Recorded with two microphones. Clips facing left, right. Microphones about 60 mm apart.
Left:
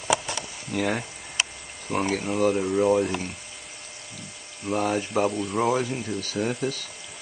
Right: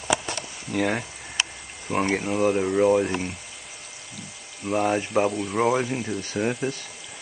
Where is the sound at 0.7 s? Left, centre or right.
Centre.